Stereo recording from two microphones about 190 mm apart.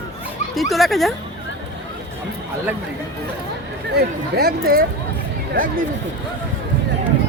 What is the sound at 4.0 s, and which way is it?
Speech, 55° right (ahead or behind).